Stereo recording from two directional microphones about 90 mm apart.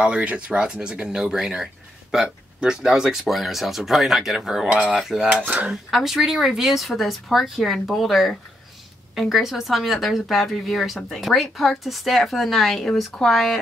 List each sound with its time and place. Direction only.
0.0 s speech: 15° right (ahead or behind)
5.4 s speech: 15° right (ahead or behind)
5.9 s speech: centre (ahead or behind)